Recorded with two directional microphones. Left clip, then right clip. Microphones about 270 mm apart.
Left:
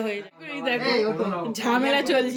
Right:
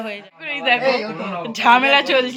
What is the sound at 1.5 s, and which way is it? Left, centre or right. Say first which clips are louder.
Speech: right 10 dB; centre.